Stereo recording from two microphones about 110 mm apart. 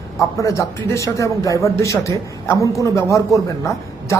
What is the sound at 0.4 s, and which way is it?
A woman's voice, 30° left (ahead or behind).